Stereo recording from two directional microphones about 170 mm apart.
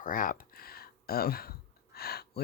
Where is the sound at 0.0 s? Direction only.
55° left (ahead or behind).